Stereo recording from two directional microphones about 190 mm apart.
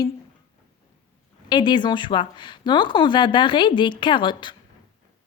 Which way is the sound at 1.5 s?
25° left (ahead or behind).